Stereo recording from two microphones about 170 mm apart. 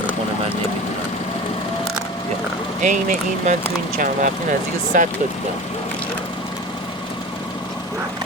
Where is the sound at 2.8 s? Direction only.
45° right (ahead or behind).